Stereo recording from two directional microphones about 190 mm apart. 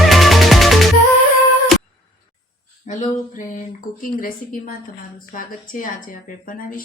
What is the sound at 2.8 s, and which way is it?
Mantra, 40° left (ahead or behind).